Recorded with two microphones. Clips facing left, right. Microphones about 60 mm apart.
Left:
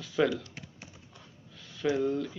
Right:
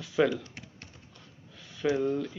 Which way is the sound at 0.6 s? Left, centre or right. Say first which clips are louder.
Even; centre.